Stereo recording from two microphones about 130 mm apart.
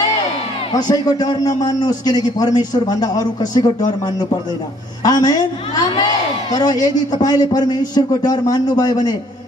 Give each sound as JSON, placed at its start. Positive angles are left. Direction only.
{"t": 0.7, "sound": "a man's voice", "side_deg": 30}
{"t": 5.0, "sound": "a man's voice", "side_deg": 30}
{"t": 6.5, "sound": "a man's voice", "side_deg": 30}